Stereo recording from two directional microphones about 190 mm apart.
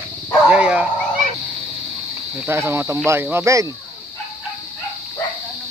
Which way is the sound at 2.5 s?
15° right (ahead or behind).